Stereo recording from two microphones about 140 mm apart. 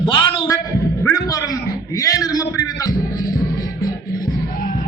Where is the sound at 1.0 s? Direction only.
25° left (ahead or behind).